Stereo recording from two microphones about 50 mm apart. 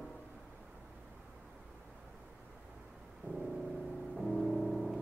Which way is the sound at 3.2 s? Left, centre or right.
Left.